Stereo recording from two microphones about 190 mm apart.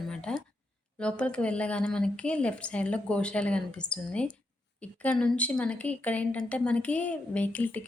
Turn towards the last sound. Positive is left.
turn(degrees=10)  # may be behind; listen again after turning